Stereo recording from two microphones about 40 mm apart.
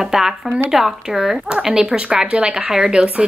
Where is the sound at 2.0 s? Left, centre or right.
Right.